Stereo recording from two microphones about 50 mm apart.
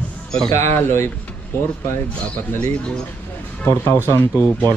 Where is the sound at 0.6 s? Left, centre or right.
Left.